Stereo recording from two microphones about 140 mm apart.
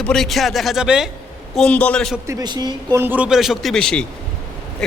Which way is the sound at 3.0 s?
15° right (ahead or behind).